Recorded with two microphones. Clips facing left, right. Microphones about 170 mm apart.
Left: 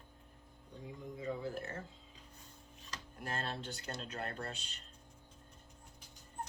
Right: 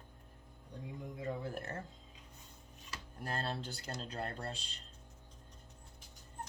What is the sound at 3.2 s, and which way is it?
Speech, 35° right (ahead or behind).